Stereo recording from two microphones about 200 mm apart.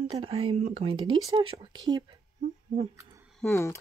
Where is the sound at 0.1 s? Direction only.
30° right (ahead or behind).